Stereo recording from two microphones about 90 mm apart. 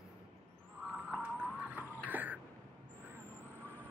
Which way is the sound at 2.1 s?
20° right (ahead or behind).